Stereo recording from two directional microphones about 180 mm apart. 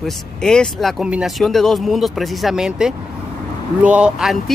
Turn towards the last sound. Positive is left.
turn(degrees=-5)  # may be behind; listen again after turning